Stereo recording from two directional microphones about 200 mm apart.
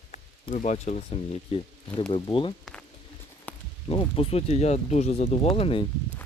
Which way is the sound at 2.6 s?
5° left (ahead or behind).